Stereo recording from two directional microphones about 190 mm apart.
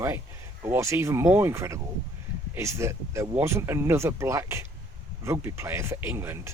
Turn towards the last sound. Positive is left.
turn(degrees=-15)  # may be behind; listen again after turning